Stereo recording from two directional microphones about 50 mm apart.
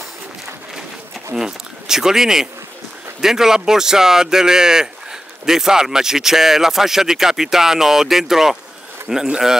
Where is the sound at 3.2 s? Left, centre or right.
Centre.